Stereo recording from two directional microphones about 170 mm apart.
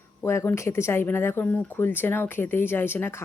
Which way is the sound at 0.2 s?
15° left (ahead or behind).